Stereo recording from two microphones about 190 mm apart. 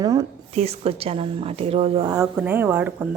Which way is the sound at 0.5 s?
35° right (ahead or behind).